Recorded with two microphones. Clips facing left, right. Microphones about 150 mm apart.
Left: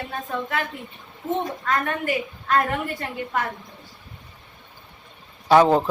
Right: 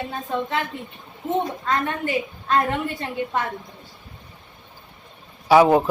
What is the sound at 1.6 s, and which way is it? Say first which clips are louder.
A woman's voice: right 1 dB; 25° right (ahead or behind).